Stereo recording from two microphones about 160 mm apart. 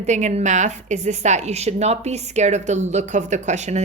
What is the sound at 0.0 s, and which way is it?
A woman's voice, 45° right (ahead or behind).